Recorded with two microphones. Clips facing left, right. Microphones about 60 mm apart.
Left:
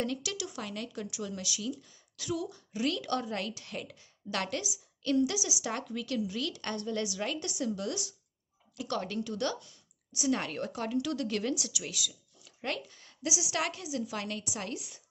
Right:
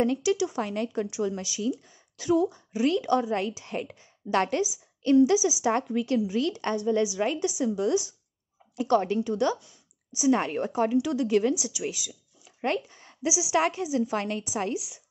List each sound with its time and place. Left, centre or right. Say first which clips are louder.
0.0 s a woman's voice: right 11 dB; right